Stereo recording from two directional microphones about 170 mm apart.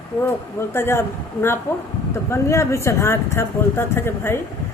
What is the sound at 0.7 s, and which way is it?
Speech, 15° left (ahead or behind).